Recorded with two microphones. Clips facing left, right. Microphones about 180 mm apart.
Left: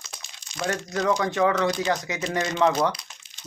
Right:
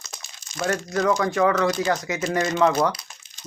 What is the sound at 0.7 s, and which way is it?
Speech, 20° left (ahead or behind).